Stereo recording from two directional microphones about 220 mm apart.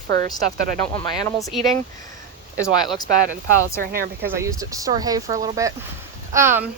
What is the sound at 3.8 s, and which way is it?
Speech, 40° right (ahead or behind).